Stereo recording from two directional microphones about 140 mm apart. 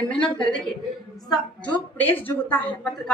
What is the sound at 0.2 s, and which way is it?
A woman's voice, 5° left (ahead or behind).